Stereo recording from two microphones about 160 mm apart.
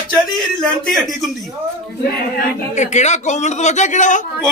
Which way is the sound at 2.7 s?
45° left (ahead or behind).